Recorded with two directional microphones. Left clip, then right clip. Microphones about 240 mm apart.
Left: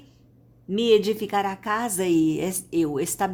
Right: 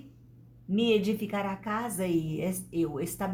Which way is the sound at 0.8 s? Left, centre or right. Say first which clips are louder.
Left 7 dB; left.